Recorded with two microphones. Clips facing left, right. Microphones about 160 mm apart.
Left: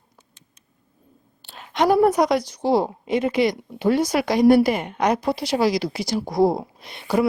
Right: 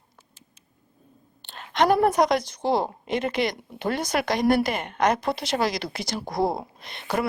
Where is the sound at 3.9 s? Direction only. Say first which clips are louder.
Left 5 dB; 55° right (ahead or behind).